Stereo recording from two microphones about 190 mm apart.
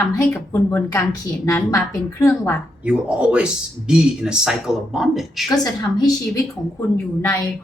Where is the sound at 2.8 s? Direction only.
5° right (ahead or behind).